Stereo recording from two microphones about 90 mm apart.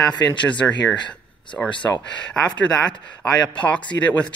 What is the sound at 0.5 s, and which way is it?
Speech, 15° left (ahead or behind).